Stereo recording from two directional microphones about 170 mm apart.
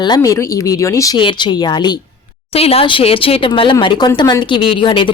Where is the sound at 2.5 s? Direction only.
35° left (ahead or behind).